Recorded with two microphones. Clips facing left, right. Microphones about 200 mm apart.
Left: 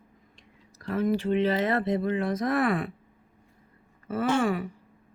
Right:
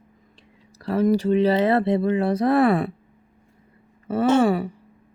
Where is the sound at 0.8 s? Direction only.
35° right (ahead or behind).